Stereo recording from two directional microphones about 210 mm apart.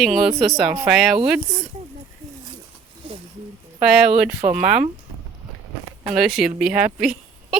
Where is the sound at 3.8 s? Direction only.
5° right (ahead or behind).